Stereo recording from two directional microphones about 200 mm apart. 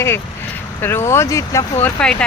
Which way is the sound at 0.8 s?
10° left (ahead or behind).